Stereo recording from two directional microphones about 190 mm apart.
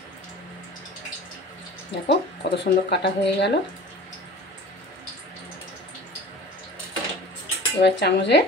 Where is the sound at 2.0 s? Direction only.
60° left (ahead or behind).